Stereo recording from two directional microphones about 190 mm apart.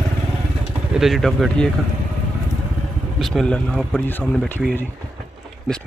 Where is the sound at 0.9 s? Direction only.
Centre (ahead or behind).